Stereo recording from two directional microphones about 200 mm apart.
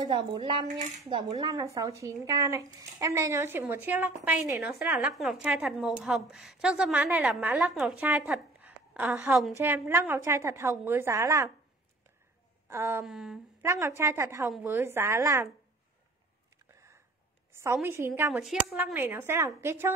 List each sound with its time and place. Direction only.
0.0 s speech: 25° right (ahead or behind)
0.7 s speech: 35° right (ahead or behind)
1.4 s a woman's voice: 20° right (ahead or behind)
12.6 s a sound: 10° right (ahead or behind)
13.0 s speech: centre (ahead or behind)
13.7 s a woman's voice: 15° right (ahead or behind)
17.5 s a sound: 15° right (ahead or behind)
17.8 s a woman's voice: 10° right (ahead or behind)
18.4 s speech: centre (ahead or behind)
18.9 s a woman's voice: 10° right (ahead or behind)